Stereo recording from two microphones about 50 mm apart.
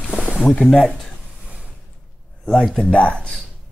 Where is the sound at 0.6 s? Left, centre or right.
Centre.